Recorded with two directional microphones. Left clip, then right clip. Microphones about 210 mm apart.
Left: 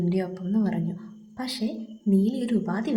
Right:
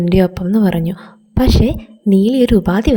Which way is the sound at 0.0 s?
40° right (ahead or behind).